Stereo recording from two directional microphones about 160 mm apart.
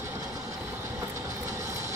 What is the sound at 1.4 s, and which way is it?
Vehicle, 20° right (ahead or behind).